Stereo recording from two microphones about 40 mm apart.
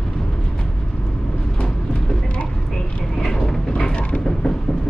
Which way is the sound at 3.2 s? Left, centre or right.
Centre.